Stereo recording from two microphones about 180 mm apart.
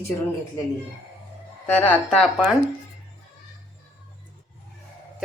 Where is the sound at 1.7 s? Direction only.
10° left (ahead or behind).